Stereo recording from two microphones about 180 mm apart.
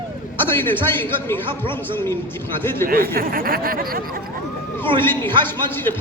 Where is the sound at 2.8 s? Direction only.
55° right (ahead or behind).